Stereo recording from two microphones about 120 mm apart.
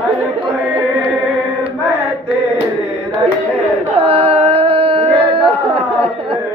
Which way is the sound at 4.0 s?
55° right (ahead or behind).